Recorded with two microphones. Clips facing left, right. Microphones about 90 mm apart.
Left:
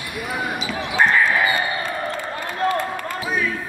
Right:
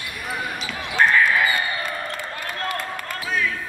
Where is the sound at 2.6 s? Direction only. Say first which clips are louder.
Left 8 dB; 15° left (ahead or behind).